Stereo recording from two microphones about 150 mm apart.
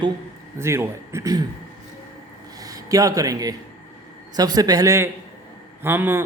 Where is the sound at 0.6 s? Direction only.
20° right (ahead or behind).